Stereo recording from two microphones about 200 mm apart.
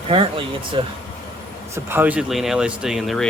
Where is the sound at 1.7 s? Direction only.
10° right (ahead or behind).